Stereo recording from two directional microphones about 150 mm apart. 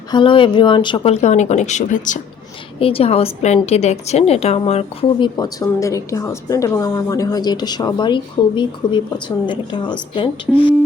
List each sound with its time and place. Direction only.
0.1 s speech: 35° left (ahead or behind); by 2.1 s 55° left (ahead or behind)
2.7 s a woman's voice: 40° left (ahead or behind)
5.4 s speech: 25° left (ahead or behind)